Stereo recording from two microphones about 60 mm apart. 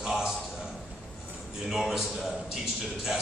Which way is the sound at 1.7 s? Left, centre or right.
Centre.